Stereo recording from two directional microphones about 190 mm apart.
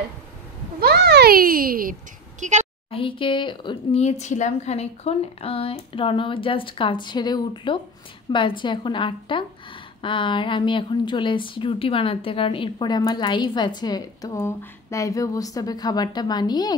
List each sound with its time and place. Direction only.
0.7 s a child's voice: 55° right (ahead or behind); by 2.6 s 40° right (ahead or behind)
2.9 s a woman's voice: 25° left (ahead or behind)